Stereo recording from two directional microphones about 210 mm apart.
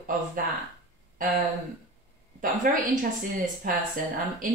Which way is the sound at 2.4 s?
40° right (ahead or behind).